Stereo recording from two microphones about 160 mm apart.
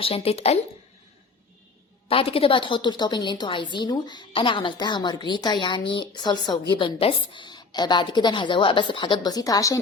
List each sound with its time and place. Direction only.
0.0 s speech: 35° left (ahead or behind)
2.0 s a woman's voice: 35° left (ahead or behind)